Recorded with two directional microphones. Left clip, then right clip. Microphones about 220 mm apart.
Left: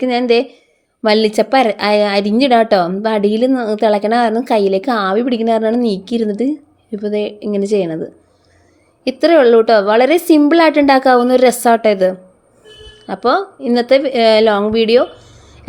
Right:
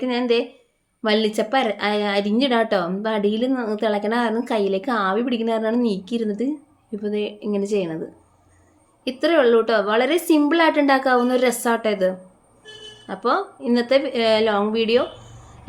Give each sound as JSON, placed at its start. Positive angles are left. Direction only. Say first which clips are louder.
{"t": 0.0, "sound": "a woman's voice", "louder": "left 7 dB", "side_deg": 35}
{"t": 9.0, "sound": "a woman's voice", "louder": "left 8 dB", "side_deg": 30}